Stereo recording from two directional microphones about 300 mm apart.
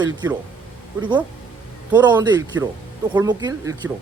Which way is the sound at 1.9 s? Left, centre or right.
Centre.